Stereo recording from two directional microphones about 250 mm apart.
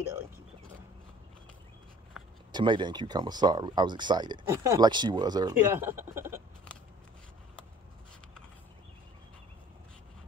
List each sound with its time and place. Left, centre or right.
2.5 s speech: centre